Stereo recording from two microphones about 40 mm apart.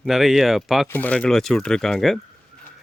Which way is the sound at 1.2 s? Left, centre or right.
Centre.